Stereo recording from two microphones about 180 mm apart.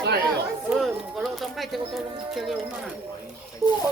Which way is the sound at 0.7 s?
Centre (ahead or behind).